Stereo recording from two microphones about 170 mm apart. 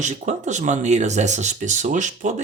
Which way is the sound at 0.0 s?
45° right (ahead or behind).